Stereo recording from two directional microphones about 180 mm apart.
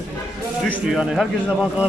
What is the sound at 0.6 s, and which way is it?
A man's voice, centre (ahead or behind).